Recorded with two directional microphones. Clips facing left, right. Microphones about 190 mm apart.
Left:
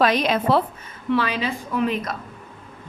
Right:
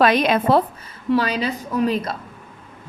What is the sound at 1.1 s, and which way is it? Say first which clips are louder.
A woman's voice: right 2 dB; 40° right (ahead or behind).